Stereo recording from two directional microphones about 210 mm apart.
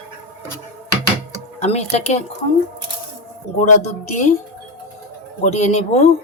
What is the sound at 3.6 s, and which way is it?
Speech, 35° left (ahead or behind).